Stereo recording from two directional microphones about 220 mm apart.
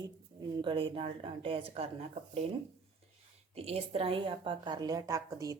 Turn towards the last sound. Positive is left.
turn(degrees=-15)  # may be behind; listen again after turning